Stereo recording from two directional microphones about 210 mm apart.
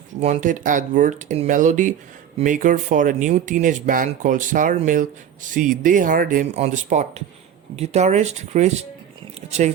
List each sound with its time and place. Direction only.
0.2 s speech: 35° right (ahead or behind)